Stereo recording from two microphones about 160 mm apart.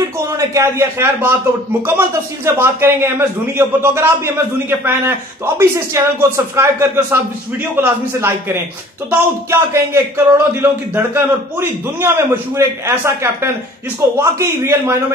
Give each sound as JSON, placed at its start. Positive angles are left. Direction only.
{"t": 0.6, "sound": "a man's voice", "side_deg": -15}